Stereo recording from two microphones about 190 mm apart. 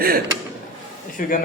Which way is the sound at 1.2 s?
45° left (ahead or behind).